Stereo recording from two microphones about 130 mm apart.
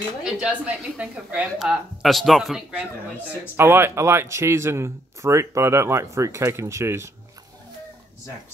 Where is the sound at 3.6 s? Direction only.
20° right (ahead or behind).